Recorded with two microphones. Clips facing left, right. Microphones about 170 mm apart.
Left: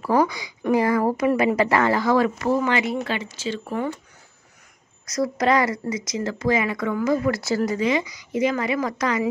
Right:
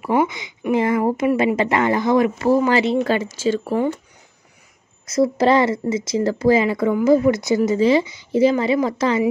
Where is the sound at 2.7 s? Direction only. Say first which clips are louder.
Right 6 dB; 35° right (ahead or behind).